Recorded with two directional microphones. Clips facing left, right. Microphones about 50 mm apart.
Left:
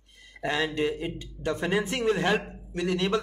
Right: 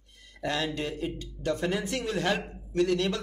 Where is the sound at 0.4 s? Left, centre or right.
Left.